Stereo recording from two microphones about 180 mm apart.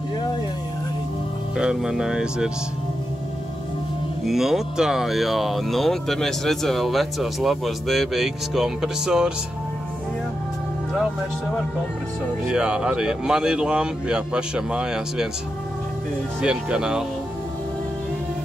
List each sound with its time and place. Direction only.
1.6 s speech: 5° right (ahead or behind)
4.2 s speech: centre (ahead or behind)
12.4 s speech: 5° right (ahead or behind)
16.3 s speech: 5° right (ahead or behind)